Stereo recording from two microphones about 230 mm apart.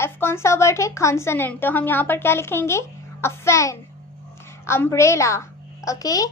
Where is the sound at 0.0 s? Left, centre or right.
Centre.